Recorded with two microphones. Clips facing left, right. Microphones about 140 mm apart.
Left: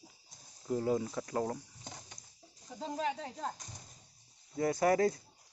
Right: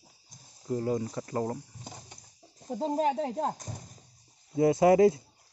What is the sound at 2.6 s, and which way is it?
Speech, 45° right (ahead or behind).